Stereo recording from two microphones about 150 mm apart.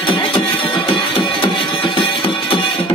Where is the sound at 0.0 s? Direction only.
35° left (ahead or behind).